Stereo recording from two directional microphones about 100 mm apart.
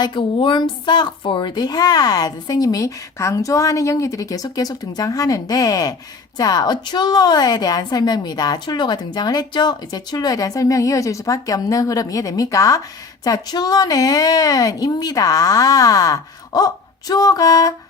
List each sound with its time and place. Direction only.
0.0 s a woman's voice: 55° left (ahead or behind); by 17.7 s 35° left (ahead or behind)